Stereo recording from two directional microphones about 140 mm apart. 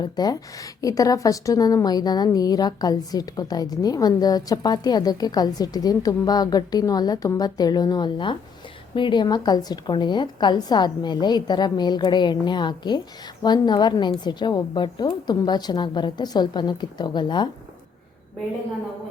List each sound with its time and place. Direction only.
0.0 s a woman's voice: 30° left (ahead or behind)